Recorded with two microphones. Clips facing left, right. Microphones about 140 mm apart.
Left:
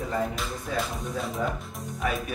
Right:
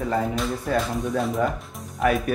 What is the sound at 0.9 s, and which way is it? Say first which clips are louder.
Speech: right 7 dB; centre (ahead or behind).